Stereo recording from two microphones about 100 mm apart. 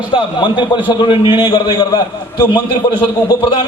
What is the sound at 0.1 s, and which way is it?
A man's voice, 50° left (ahead or behind).